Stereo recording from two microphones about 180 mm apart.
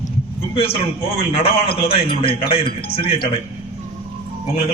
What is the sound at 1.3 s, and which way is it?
A man's voice, 35° left (ahead or behind).